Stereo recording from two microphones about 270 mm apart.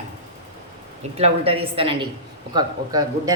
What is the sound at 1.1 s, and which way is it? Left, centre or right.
A woman's voice, right.